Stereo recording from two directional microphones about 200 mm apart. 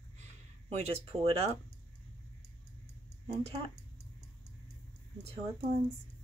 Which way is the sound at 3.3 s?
30° right (ahead or behind).